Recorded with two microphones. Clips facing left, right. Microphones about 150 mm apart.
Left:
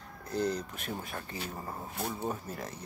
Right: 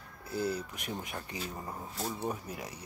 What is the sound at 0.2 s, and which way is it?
Speech, 5° right (ahead or behind).